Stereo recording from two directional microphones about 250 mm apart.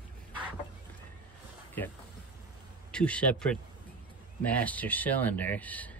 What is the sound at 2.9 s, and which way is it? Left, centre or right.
Speech, centre.